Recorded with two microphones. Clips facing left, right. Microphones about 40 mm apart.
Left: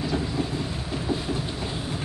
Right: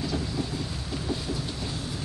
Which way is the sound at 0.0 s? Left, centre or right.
Centre.